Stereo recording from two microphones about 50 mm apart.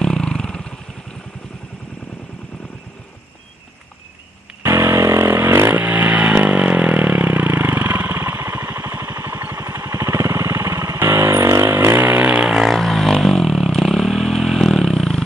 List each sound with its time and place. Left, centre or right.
0.0 s vehicle: centre
4.6 s a sound: right
5.3 s vehicle: right
5.8 s vehicle: right
11.4 s vehicle: right
12.2 s vehicle: right
12.6 s vehicle: centre